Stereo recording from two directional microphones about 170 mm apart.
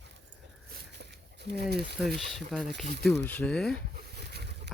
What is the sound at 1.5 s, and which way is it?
Speech, 70° right (ahead or behind).